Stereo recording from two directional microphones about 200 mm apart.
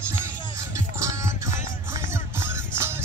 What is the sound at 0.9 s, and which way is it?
Music, 15° right (ahead or behind).